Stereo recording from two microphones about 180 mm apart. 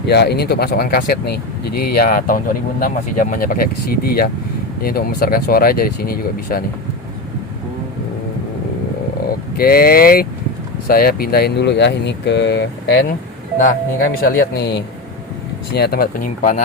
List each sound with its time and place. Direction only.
0.1 s speech: 65° left (ahead or behind)
9.6 s speech: 55° left (ahead or behind)
13.6 s speech: 50° left (ahead or behind)